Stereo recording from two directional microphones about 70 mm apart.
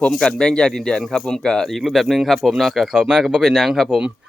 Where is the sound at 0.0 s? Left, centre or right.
Centre.